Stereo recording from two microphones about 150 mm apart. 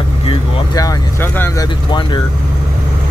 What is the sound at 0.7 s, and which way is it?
Speech, 20° left (ahead or behind).